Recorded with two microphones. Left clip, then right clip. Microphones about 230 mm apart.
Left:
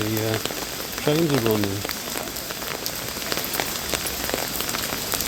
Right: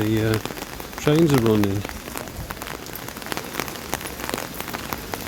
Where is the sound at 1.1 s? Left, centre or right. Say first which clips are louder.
Right 3 dB; right.